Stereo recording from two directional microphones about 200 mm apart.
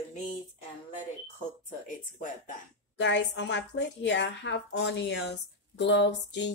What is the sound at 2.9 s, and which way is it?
A woman's voice, 60° left (ahead or behind).